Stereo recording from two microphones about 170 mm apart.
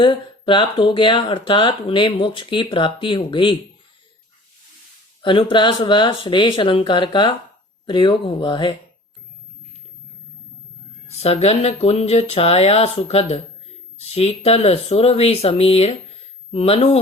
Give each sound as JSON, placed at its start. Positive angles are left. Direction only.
{"t": 0.0, "sound": "speech", "side_deg": 30}
{"t": 5.2, "sound": "speech", "side_deg": 30}
{"t": 11.1, "sound": "speech", "side_deg": 40}